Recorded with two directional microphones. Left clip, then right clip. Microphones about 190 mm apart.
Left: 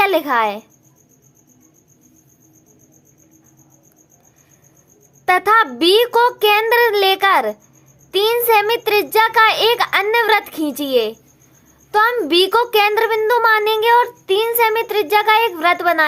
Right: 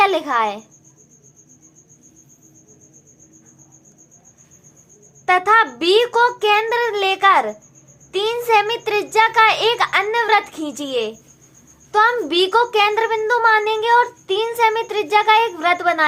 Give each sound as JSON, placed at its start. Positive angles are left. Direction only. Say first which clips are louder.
{"t": 0.0, "sound": "speech", "louder": "left 1 dB", "side_deg": 25}
{"t": 5.2, "sound": "a child's voice", "louder": "left 1 dB", "side_deg": 30}